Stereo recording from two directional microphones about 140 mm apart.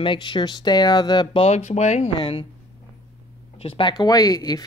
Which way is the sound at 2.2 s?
35° left (ahead or behind).